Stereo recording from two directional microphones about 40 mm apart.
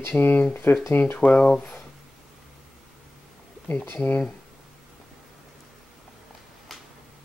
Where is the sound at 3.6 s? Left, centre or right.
Left.